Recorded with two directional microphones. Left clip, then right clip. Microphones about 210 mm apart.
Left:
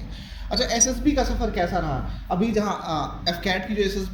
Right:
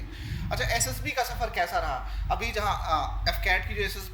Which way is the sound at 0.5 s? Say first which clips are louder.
Left 7 dB; 45° right (ahead or behind).